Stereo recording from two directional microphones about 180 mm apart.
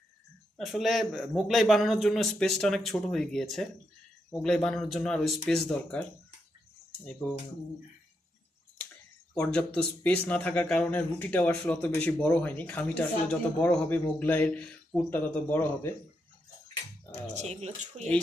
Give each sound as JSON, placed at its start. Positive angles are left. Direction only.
{"t": 0.5, "sound": "a man's voice", "side_deg": 0}
{"t": 9.3, "sound": "speech", "side_deg": 5}
{"t": 17.3, "sound": "speech", "side_deg": -35}